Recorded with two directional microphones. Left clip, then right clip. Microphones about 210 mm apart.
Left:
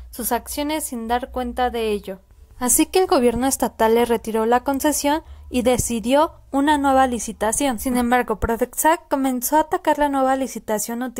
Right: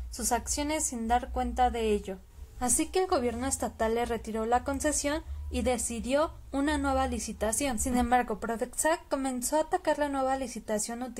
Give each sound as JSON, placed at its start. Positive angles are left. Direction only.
{"t": 0.2, "sound": "a woman's voice", "side_deg": 35}